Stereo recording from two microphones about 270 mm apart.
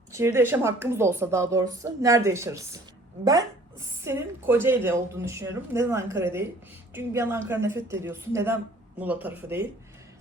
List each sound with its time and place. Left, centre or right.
0.1 s a woman's voice: centre